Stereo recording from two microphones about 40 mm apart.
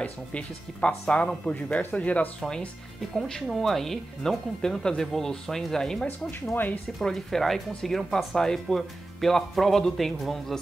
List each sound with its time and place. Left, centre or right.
0.0 s speech: left
3.4 s speech: centre
6.0 s speech: left
7.0 s speech: centre